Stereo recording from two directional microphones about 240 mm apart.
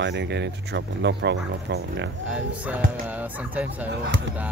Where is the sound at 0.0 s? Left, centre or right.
Right.